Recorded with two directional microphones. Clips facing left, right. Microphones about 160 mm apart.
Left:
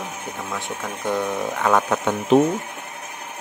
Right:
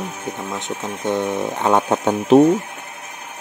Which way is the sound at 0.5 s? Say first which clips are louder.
Right 2 dB; 20° right (ahead or behind).